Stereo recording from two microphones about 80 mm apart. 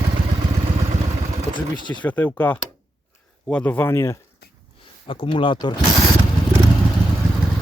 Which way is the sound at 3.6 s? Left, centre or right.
Left.